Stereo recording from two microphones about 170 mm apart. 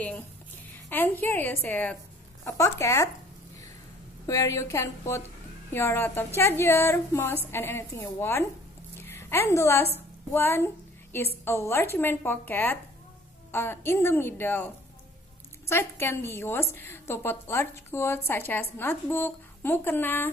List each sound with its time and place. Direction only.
0.8 s a woman's voice: 10° left (ahead or behind)
4.3 s a woman's voice: 20° left (ahead or behind)
15.7 s a woman's voice: 15° left (ahead or behind)